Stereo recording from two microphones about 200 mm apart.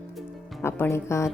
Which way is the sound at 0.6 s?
15° left (ahead or behind).